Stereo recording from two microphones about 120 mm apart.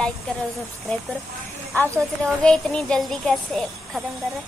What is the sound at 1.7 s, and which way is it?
A woman's voice, 15° left (ahead or behind).